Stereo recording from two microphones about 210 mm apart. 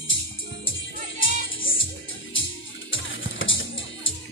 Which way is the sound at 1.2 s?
70° left (ahead or behind).